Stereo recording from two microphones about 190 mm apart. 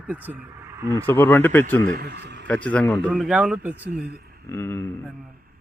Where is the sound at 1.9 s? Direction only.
60° right (ahead or behind).